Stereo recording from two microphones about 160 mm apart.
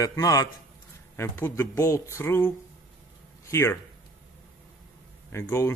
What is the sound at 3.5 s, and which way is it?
Speech, 15° left (ahead or behind).